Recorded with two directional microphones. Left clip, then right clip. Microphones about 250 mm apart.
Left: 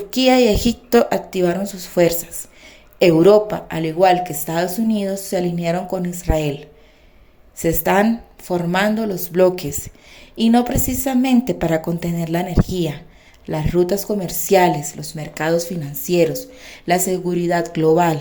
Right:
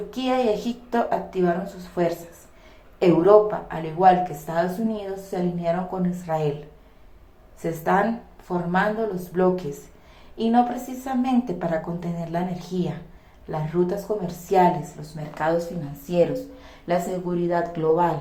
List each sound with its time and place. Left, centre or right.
0.1 s a woman's voice: left
7.6 s a woman's voice: left